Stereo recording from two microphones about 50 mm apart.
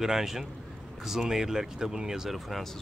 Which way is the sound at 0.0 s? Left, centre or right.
Centre.